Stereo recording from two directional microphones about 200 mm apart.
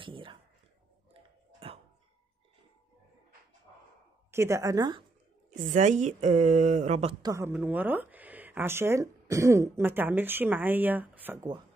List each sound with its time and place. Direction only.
0.0 s speech: 25° right (ahead or behind)
4.3 s speech: 15° right (ahead or behind)
5.5 s speech: 40° right (ahead or behind)
7.2 s speech: 15° right (ahead or behind)